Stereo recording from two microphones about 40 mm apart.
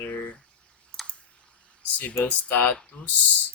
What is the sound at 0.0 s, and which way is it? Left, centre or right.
Drip, left.